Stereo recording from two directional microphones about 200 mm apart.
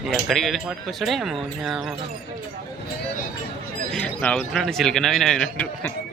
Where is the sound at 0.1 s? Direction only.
Centre (ahead or behind).